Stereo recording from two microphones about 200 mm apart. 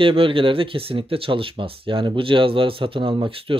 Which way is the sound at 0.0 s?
25° right (ahead or behind).